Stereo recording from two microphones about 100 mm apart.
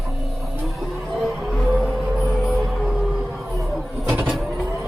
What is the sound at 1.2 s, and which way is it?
Music, centre (ahead or behind).